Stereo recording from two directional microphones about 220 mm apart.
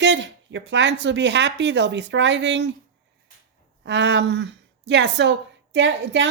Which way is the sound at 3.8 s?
55° right (ahead or behind).